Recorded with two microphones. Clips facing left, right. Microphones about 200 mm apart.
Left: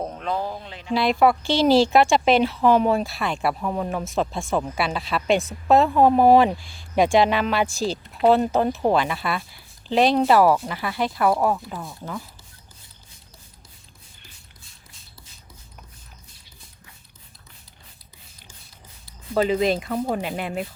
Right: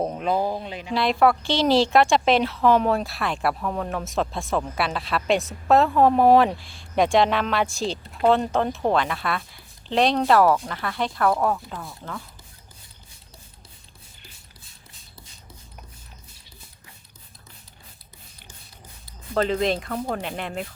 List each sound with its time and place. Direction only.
0.0 s a sound: 15° right (ahead or behind)
0.5 s speech: 15° right (ahead or behind)
0.9 s speech: centre (ahead or behind)
19.3 s speech: 5° left (ahead or behind)